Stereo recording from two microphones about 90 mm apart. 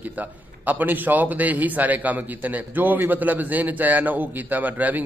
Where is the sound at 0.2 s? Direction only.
20° right (ahead or behind).